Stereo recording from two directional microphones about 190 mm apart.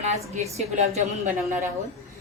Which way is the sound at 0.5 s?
35° right (ahead or behind).